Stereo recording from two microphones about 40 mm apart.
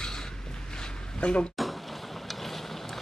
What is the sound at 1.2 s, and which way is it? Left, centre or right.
Speech, left.